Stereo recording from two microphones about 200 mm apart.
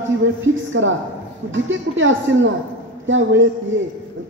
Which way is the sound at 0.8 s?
80° right.